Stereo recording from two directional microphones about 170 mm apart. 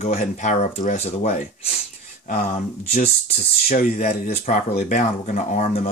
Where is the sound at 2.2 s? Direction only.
55° left (ahead or behind).